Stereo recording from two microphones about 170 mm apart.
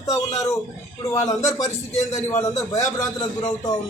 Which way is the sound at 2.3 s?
15° left (ahead or behind).